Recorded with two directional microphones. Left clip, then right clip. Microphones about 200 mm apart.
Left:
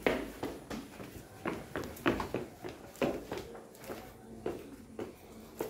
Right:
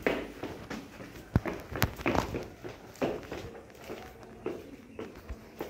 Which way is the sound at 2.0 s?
20° left (ahead or behind).